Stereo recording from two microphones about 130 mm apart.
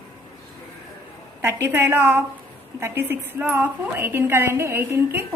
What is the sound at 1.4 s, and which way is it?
A woman's voice, 20° right (ahead or behind).